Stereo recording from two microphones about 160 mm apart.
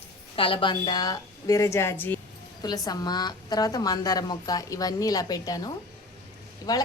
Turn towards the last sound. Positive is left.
turn(degrees=25)  # may be behind; listen again after turning